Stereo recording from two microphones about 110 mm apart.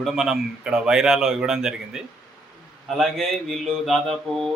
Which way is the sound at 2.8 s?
Centre (ahead or behind).